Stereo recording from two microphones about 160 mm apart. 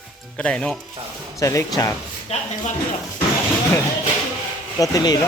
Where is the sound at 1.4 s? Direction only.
20° left (ahead or behind).